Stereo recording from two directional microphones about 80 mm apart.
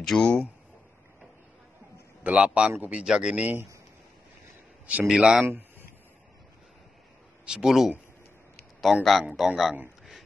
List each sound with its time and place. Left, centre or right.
0.0 s speech: centre
2.2 s speech: centre
5.0 s speech: centre
7.4 s speech: centre